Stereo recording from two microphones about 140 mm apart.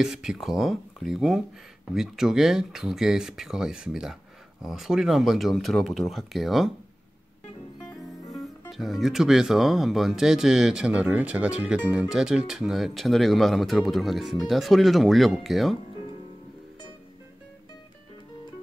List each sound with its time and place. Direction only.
0.0 s speech: 5° right (ahead or behind)
8.4 s speech: centre (ahead or behind)